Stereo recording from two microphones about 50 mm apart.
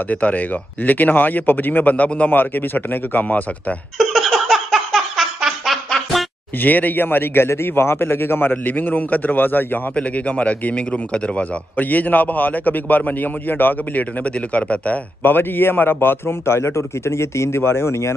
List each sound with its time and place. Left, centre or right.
0.1 s a man's voice: left
4.0 s giggle: centre
5.9 s a sound: centre
6.6 s a man's voice: left
7.4 s a man's voice: left
9.9 s speech: left
11.7 s a man's voice: left
15.2 s a man's voice: left